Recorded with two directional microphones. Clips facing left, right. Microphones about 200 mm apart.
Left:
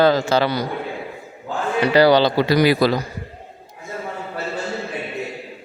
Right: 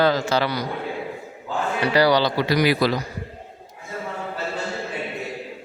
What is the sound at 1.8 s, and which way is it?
Speech, 25° left (ahead or behind).